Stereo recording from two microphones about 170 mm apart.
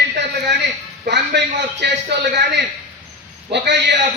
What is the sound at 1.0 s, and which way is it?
A man's voice, 85° right.